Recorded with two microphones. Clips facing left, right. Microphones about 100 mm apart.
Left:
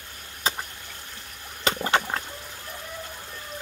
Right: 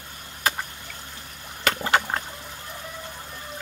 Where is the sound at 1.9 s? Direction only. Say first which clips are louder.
Right 2 dB; 40° right (ahead or behind).